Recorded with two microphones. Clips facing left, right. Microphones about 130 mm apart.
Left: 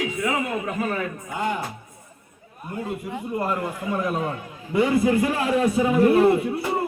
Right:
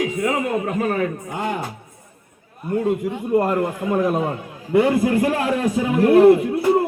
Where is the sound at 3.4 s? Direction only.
50° right (ahead or behind).